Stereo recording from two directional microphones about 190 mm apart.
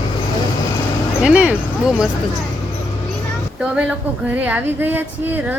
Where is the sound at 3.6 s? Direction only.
5° right (ahead or behind).